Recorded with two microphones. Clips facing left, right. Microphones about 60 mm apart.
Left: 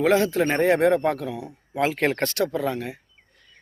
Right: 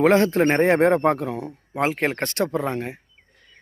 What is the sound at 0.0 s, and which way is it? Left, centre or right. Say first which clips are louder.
Speech: right 3 dB; right.